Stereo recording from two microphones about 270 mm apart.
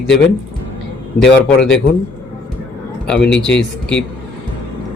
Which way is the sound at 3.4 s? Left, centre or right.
Centre.